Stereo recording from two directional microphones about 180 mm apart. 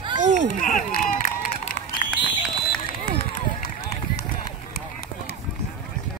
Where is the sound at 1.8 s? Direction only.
45° left (ahead or behind).